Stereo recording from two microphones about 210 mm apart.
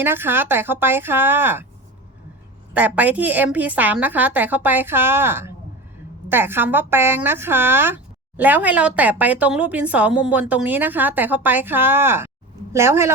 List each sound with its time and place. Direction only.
0.0 s a woman's voice: 10° right (ahead or behind)
2.7 s a woman's voice: 5° right (ahead or behind)